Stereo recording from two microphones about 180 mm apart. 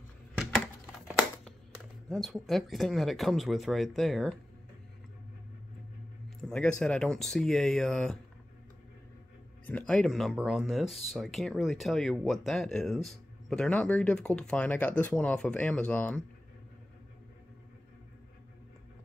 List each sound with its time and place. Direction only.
0.4 s a sound: centre (ahead or behind)
2.0 s speech: centre (ahead or behind)
6.5 s speech: 5° left (ahead or behind)
9.7 s speech: 5° left (ahead or behind)